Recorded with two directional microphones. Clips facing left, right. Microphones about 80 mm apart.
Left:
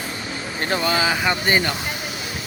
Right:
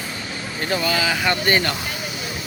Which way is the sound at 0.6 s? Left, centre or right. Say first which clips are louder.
Left 1 dB; left.